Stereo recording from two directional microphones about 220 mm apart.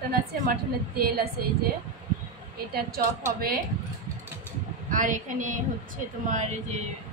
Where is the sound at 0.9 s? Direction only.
45° right (ahead or behind).